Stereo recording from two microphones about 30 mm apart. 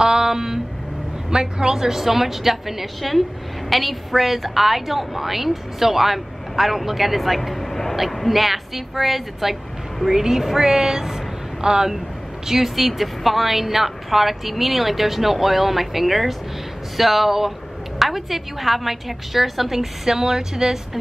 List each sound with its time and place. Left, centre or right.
0.0 s a sound: right
1.3 s a woman's voice: right
2.0 s a woman's voice: centre
3.0 s a woman's voice: centre
12.7 s a woman's voice: centre